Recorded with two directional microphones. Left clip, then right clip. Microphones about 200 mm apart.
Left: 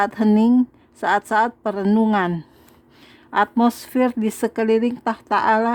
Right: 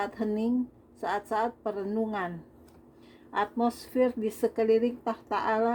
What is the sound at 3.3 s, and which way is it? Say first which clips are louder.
Speech: left 10 dB; 35° left (ahead or behind).